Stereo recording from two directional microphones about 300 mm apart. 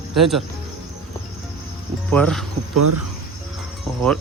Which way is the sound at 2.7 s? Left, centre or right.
Right.